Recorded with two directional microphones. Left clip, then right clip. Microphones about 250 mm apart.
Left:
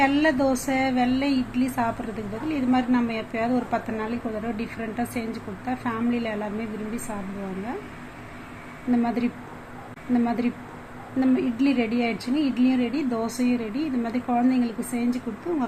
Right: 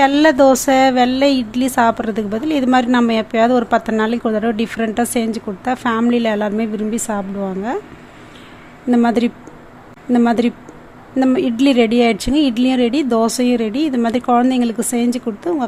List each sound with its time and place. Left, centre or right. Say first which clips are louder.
0.0 s speech: right 10 dB; right
8.9 s speech: right 10 dB; right